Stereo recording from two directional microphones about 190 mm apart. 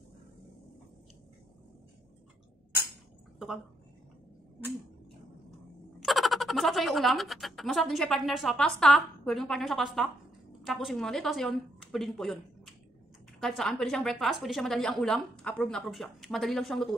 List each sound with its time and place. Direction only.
5.9 s a woman's voice: centre (ahead or behind)